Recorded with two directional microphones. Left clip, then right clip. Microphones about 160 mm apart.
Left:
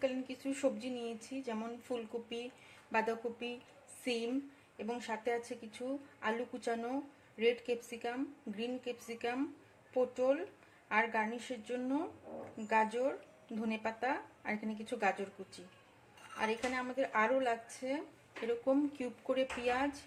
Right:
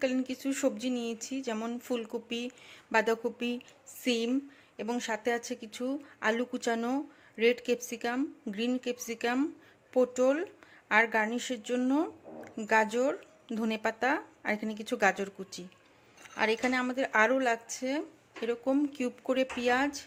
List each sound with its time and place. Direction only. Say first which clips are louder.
0.0 s speech: right 6 dB; 65° right (ahead or behind)
4.0 s speech: right 7 dB; 60° right (ahead or behind)
18.4 s speech: right 3 dB; 50° right (ahead or behind)